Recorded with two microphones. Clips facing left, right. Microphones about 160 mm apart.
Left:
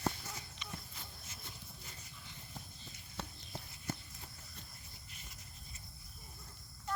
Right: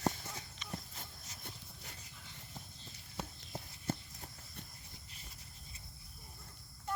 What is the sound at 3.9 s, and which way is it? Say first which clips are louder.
Clip-clop: right 4 dB; 30° right (ahead or behind).